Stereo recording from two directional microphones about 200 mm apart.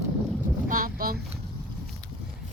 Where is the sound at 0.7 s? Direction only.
45° right (ahead or behind).